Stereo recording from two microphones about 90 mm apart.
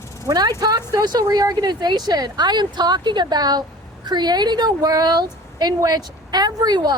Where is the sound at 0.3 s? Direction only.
45° right (ahead or behind).